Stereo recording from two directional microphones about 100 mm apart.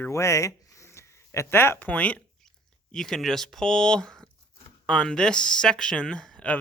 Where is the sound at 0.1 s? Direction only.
30° left (ahead or behind); by 2.5 s 15° left (ahead or behind).